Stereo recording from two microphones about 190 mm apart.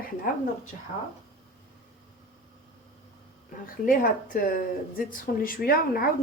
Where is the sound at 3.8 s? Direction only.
45° left (ahead or behind).